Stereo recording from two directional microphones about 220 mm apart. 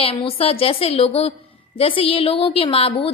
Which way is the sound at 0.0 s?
25° left (ahead or behind).